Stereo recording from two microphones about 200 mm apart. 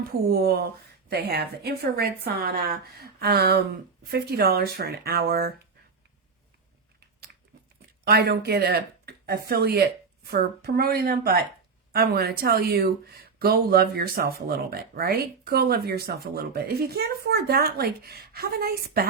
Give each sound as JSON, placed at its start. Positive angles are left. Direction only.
{"t": 0.3, "sound": "speech", "side_deg": -50}
{"t": 8.0, "sound": "speech", "side_deg": -50}